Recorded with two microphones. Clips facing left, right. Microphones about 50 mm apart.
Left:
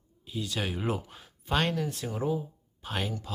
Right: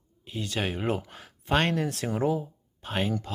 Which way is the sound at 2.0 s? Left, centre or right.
Right.